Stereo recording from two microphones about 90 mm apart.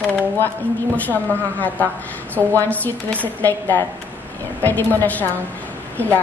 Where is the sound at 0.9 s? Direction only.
20° left (ahead or behind).